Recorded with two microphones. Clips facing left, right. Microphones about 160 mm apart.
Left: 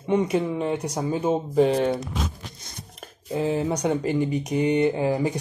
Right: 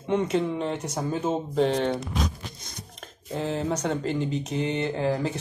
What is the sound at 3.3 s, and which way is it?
Speech, 10° left (ahead or behind).